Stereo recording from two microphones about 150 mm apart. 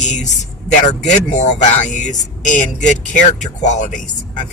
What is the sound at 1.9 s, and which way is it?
Speech, 55° left (ahead or behind).